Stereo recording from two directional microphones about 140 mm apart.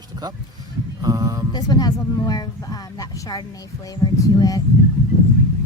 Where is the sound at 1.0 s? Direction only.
25° right (ahead or behind).